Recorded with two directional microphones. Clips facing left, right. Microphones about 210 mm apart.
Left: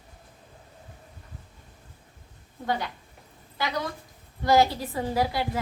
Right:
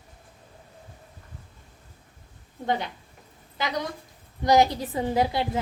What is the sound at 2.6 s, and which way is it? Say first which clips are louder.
Speech: right 2 dB; 20° right (ahead or behind).